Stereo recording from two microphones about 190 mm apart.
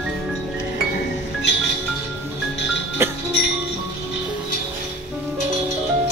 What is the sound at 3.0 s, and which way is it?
Music, 15° right (ahead or behind).